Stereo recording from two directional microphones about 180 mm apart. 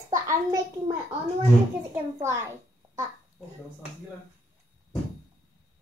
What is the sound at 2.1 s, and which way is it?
Speech, 15° right (ahead or behind).